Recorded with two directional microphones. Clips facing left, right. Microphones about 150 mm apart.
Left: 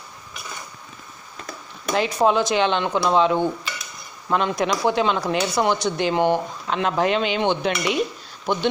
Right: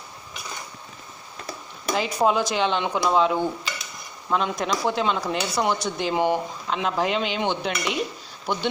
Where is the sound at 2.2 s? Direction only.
5° right (ahead or behind).